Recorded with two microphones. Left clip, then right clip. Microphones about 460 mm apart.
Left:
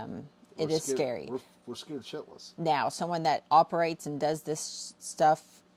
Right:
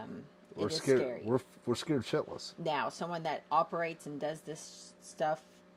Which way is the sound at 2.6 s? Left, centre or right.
Left.